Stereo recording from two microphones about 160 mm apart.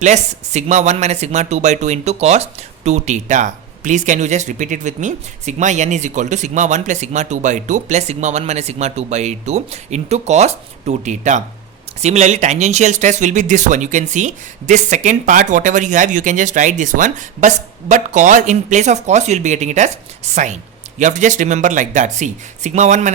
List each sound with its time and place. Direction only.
0.0 s speech: 45° right (ahead or behind)